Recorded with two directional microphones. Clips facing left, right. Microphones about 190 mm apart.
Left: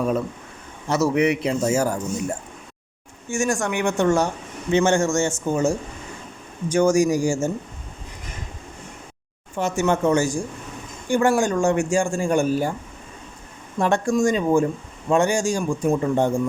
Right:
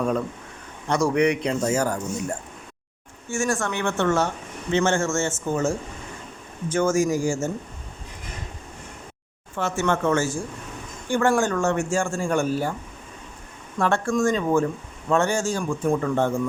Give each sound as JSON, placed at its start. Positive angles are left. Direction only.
{"t": 0.9, "sound": "speech", "side_deg": 5}
{"t": 3.2, "sound": "speech", "side_deg": 15}
{"t": 9.6, "sound": "speech", "side_deg": 15}
{"t": 13.7, "sound": "speech", "side_deg": 15}